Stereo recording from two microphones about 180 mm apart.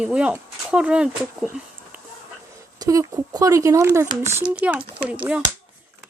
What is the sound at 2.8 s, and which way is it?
Speech, 20° right (ahead or behind).